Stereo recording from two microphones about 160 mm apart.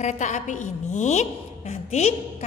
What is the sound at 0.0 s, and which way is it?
A woman's voice, 50° left (ahead or behind).